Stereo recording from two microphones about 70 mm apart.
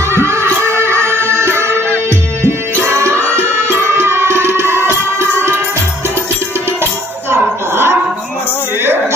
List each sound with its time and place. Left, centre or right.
0.1 s music: right
7.2 s music: right